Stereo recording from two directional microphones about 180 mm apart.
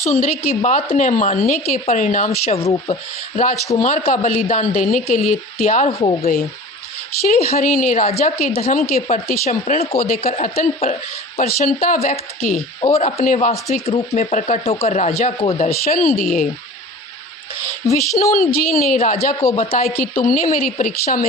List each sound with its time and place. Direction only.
0.0 s speech: 40° left (ahead or behind)
3.8 s speech: 45° left (ahead or behind)
7.3 s speech: 35° left (ahead or behind)
7.6 s speech: 50° left (ahead or behind)
15.9 s speech: 50° left (ahead or behind)
17.8 s speech: 15° left (ahead or behind)
18.3 s a woman's voice: 55° left (ahead or behind)
18.9 s speech: 35° left (ahead or behind)
20.2 s speech: 50° left (ahead or behind)